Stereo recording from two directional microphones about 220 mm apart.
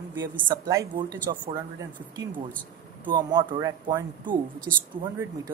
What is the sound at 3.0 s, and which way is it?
Speech, 20° right (ahead or behind).